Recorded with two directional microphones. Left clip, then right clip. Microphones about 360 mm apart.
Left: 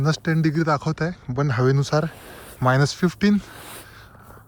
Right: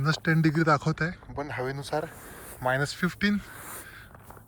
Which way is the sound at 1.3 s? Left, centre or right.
Left.